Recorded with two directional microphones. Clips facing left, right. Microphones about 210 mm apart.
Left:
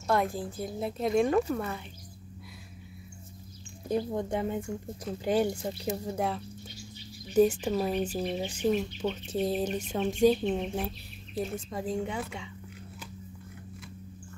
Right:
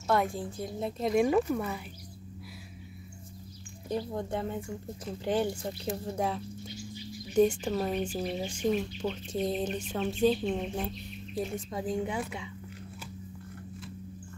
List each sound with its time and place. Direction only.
0.0 s speech: centre (ahead or behind)
3.9 s speech: 15° left (ahead or behind)
5.9 s speech: centre (ahead or behind)